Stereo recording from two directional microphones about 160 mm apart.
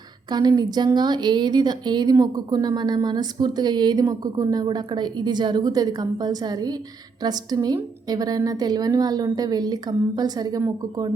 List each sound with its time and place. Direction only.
0.3 s a woman's voice: 25° right (ahead or behind)